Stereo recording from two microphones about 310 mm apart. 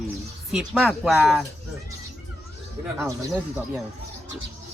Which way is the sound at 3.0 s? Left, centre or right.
Centre.